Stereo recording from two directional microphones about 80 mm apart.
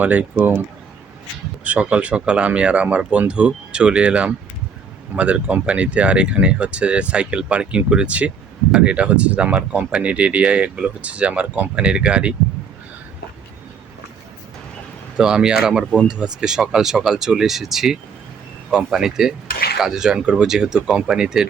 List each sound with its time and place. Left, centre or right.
0.0 s speech: centre
1.6 s speech: centre
15.2 s speech: centre